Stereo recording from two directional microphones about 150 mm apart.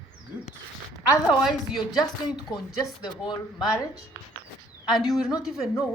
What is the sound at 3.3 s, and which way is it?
Speech, 20° left (ahead or behind).